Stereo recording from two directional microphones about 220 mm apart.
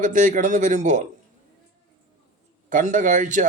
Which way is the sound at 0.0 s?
35° right (ahead or behind).